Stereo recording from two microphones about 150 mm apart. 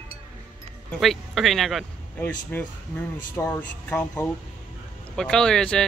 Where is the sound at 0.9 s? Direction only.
Centre (ahead or behind).